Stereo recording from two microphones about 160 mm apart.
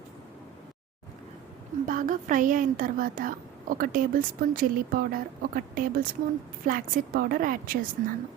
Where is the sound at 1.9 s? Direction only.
55° right (ahead or behind).